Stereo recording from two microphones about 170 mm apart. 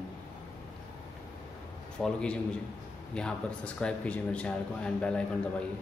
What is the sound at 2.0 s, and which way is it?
A man's voice, 5° left (ahead or behind).